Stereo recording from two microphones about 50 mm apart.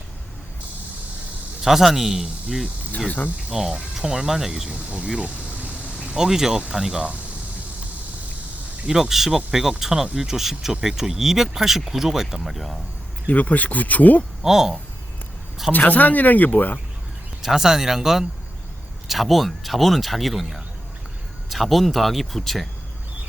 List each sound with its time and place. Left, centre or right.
1.6 s speech: centre
3.5 s speech: centre
4.7 s speech: right
6.1 s speech: centre
8.9 s speech: centre
13.2 s speech: left
14.4 s speech: centre
15.7 s speech: left
17.4 s speech: centre